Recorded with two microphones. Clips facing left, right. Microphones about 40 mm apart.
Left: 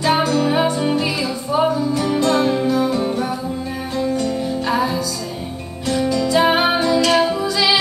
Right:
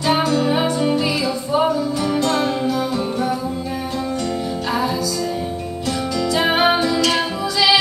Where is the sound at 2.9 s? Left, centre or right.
Centre.